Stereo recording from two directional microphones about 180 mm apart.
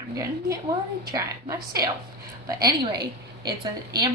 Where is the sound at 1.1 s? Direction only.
20° right (ahead or behind).